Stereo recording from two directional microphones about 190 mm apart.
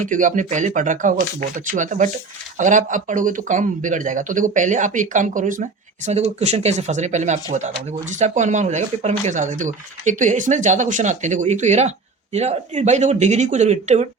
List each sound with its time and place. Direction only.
0.0 s speech: 45° right (ahead or behind)